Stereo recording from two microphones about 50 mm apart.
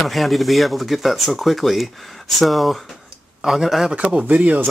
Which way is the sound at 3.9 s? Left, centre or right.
Right.